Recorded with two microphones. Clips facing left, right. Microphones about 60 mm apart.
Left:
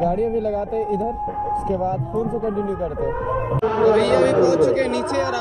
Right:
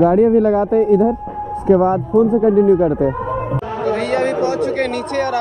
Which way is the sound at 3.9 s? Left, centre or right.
Right.